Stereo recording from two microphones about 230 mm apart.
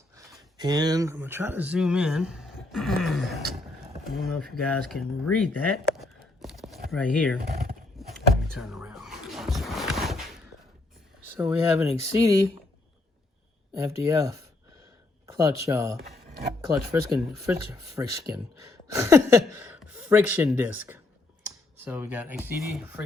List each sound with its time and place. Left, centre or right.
0.2 s speech: centre
6.4 s a sound: centre
6.9 s speech: centre
7.4 s a sound: right
7.9 s vehicle: centre
11.3 s speech: centre
12.1 s speech: centre
13.7 s speech: centre